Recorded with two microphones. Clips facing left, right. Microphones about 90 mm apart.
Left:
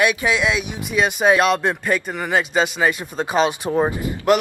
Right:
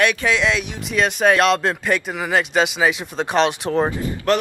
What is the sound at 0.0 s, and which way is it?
Speech, 10° left (ahead or behind).